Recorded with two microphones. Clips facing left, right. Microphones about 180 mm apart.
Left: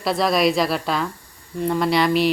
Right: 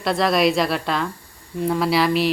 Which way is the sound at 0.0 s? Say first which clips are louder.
Even; centre (ahead or behind).